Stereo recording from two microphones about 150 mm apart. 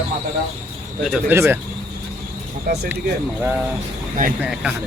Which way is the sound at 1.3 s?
15° right (ahead or behind).